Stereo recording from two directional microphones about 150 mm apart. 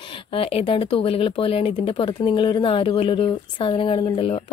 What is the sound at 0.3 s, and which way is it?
Speech, 40° left (ahead or behind).